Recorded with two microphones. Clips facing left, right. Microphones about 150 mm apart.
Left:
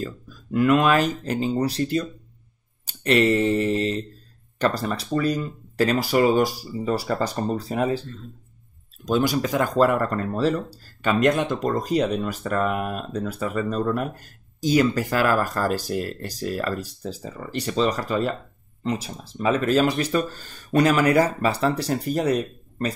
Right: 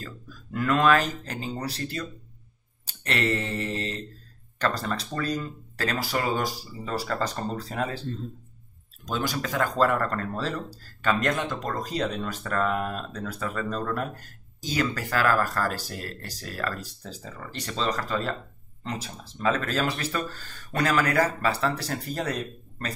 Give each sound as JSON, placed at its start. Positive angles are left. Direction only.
{"t": 0.5, "sound": "speech", "side_deg": 15}
{"t": 9.0, "sound": "speech", "side_deg": 15}